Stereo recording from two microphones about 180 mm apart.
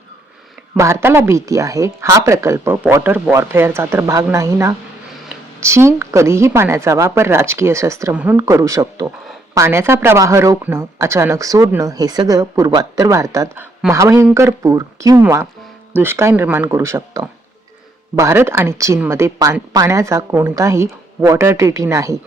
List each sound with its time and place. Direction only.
0.8 s speech: 15° right (ahead or behind)